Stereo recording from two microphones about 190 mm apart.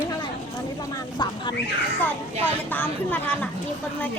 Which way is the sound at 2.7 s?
10° left (ahead or behind).